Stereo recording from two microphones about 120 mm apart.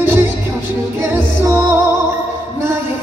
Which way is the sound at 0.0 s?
20° right (ahead or behind).